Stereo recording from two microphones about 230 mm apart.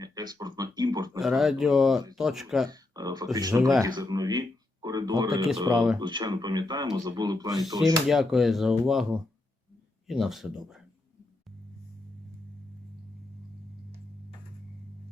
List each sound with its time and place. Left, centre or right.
0.0 s a sound: centre
1.2 s speech: centre
2.6 s a sound: centre
3.3 s speech: centre
3.8 s a sound: centre
5.7 s speech: centre
6.0 s speech: centre
8.0 s speech: centre
10.1 s speech: centre